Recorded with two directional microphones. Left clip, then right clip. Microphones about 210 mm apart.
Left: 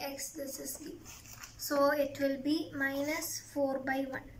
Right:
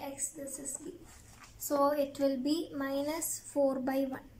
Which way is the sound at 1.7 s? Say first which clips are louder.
Even; 20° right (ahead or behind).